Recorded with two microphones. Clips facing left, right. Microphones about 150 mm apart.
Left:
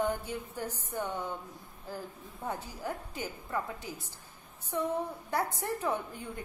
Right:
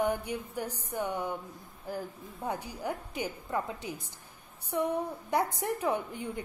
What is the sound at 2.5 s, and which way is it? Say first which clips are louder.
A woman's voice: right 2 dB; 15° right (ahead or behind).